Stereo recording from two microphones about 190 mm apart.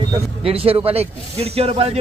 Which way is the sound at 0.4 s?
30° right (ahead or behind).